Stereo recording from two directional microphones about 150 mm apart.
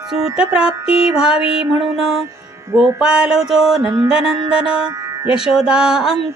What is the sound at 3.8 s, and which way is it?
Music, 25° right (ahead or behind).